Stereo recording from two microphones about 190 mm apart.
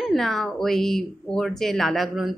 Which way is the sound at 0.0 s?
Centre (ahead or behind).